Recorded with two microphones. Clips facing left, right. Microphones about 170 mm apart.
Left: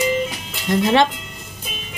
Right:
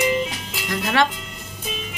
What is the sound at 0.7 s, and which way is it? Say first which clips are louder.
Speech: left 6 dB; 25° left (ahead or behind).